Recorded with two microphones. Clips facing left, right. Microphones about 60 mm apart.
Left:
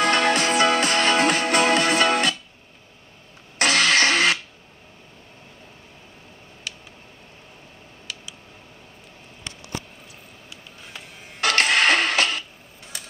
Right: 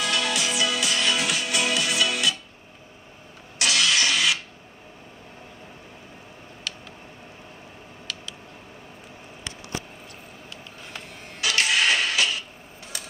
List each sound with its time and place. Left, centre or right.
0.0 s music: left
3.5 s vehicle: left
11.4 s creak: left
12.8 s a sound: centre